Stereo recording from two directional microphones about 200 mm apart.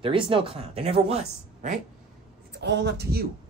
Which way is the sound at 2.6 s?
55° right (ahead or behind).